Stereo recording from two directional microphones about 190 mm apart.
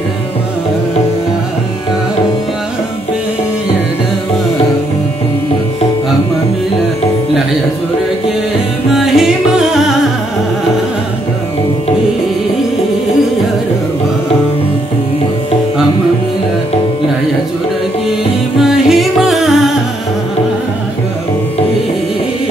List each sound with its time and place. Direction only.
8.9 s music: centre (ahead or behind)
18.6 s music: centre (ahead or behind)